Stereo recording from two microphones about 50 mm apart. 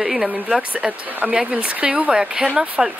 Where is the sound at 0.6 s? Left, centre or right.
Right.